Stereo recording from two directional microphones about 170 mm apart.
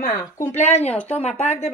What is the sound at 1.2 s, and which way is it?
Speech, 40° left (ahead or behind).